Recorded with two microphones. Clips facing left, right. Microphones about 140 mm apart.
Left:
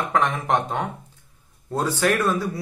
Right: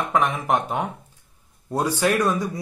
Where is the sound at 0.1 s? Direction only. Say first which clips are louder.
Even; 10° right (ahead or behind).